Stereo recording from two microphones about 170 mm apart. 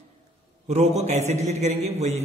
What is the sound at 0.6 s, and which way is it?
A man's voice, 40° right (ahead or behind).